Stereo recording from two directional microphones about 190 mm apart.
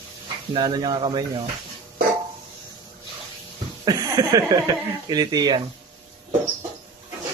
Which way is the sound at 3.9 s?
20° right (ahead or behind).